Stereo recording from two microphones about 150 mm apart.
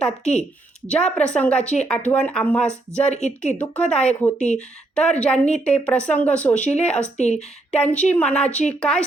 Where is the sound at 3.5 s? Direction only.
10° left (ahead or behind).